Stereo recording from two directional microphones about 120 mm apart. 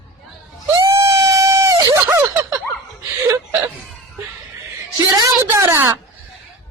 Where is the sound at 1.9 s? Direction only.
20° right (ahead or behind).